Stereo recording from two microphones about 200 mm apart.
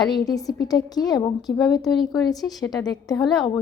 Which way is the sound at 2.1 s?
20° left (ahead or behind).